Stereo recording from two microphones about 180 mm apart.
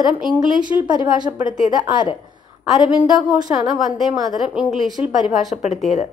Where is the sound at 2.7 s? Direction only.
Centre (ahead or behind).